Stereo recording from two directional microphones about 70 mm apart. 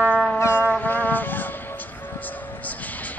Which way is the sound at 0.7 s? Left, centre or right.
Left.